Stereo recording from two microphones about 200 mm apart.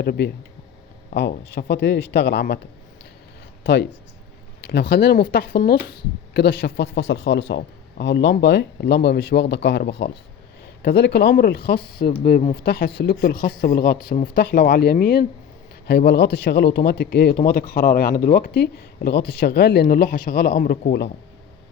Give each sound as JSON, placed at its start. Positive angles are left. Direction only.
{"t": 0.0, "sound": "a man's voice", "side_deg": 55}
{"t": 3.6, "sound": "a man's voice", "side_deg": 60}